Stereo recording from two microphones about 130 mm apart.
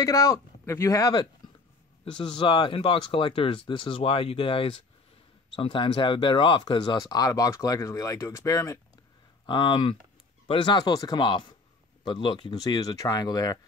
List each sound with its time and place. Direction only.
0.0 s speech: 25° left (ahead or behind)
9.5 s speech: 40° left (ahead or behind)